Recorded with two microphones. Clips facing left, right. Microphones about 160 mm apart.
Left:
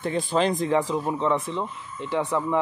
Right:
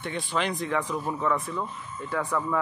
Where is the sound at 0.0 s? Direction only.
35° left (ahead or behind).